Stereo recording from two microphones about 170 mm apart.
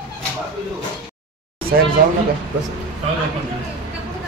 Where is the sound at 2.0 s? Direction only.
65° right (ahead or behind).